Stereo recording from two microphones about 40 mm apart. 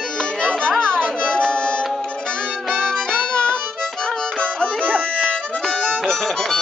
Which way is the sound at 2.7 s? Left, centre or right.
Centre.